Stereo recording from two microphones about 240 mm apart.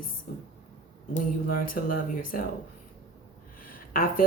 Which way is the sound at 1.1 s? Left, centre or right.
Left.